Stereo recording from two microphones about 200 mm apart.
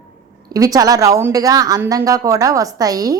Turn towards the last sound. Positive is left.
turn(degrees=-20)  # may be behind; listen again after turning